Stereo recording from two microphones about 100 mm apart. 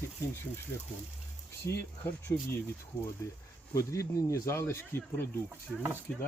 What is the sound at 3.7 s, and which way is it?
Speech, 30° left (ahead or behind).